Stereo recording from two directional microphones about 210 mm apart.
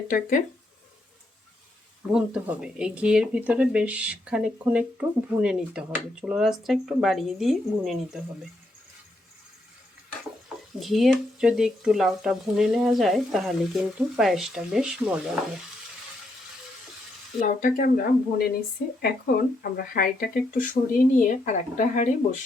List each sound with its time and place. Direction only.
0.1 s speech: 40° left (ahead or behind)
2.1 s speech: 5° right (ahead or behind)
10.8 s speech: centre (ahead or behind)
17.4 s speech: 40° left (ahead or behind)